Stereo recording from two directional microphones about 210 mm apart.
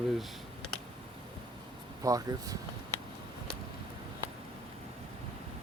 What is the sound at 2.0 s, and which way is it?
Speech, 15° right (ahead or behind).